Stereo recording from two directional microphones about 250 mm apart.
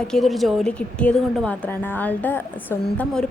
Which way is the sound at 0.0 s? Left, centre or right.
Centre.